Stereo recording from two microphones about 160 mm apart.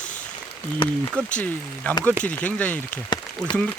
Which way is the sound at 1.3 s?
10° left (ahead or behind).